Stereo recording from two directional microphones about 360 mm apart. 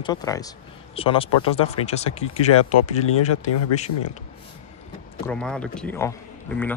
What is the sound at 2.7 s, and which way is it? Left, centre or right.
Speech, left.